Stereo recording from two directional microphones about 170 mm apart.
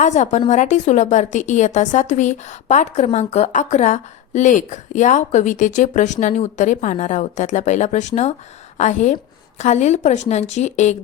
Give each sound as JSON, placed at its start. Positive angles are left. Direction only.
{"t": 0.0, "sound": "a woman's voice", "side_deg": 45}